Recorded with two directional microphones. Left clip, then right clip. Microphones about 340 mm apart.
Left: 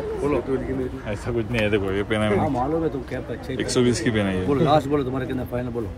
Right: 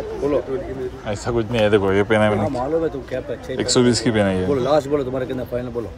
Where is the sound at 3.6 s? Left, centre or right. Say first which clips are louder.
Right 4 dB; centre.